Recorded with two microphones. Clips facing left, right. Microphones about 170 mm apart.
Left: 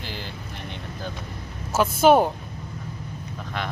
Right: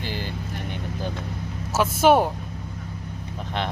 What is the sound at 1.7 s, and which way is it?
Speech, 5° right (ahead or behind).